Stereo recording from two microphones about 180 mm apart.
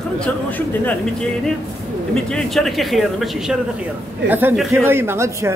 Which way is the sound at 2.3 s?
Centre (ahead or behind).